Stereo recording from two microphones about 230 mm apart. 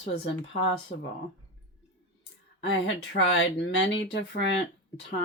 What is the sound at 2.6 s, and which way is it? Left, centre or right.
Speech, left.